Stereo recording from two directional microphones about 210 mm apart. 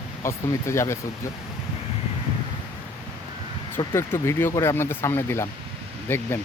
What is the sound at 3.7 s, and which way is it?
Speech, 15° left (ahead or behind).